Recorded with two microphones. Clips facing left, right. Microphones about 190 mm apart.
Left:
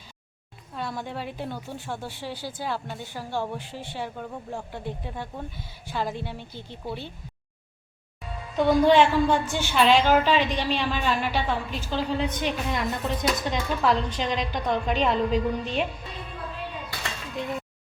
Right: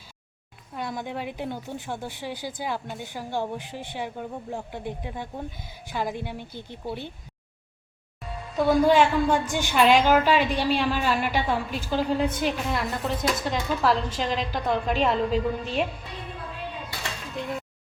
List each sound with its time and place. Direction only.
0.8 s a woman's voice: 15° right (ahead or behind)
8.5 s a woman's voice: 5° right (ahead or behind)